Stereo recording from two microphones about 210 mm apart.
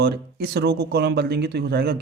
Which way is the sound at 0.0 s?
50° right (ahead or behind).